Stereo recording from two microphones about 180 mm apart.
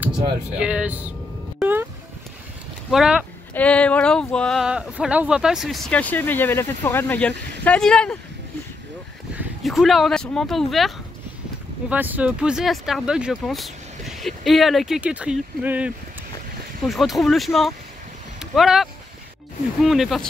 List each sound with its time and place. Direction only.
0.6 s speech: 5° right (ahead or behind)
1.6 s music: 10° right (ahead or behind)
2.9 s speech: 5° right (ahead or behind)
3.5 s speech: 5° left (ahead or behind)
9.3 s speech: 5° right (ahead or behind)
11.9 s speech: 10° right (ahead or behind)